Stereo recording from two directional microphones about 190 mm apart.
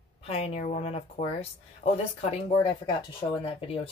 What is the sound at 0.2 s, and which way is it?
Speech, 30° left (ahead or behind).